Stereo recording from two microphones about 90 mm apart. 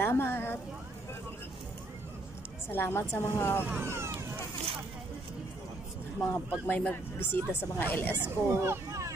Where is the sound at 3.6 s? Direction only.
25° right (ahead or behind).